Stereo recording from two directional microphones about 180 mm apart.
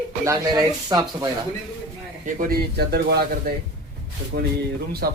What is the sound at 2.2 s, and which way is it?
Speech, 50° right (ahead or behind).